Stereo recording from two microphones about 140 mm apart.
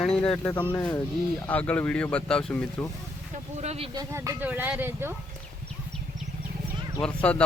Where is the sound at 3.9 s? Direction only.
20° right (ahead or behind).